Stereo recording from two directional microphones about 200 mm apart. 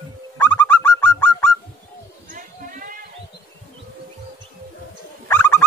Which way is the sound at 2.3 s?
40° right (ahead or behind).